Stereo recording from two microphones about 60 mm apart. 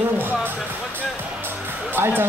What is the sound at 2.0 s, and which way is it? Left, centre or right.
Speech, right.